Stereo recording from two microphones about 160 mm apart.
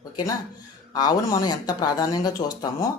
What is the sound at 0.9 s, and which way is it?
Speech, 25° left (ahead or behind).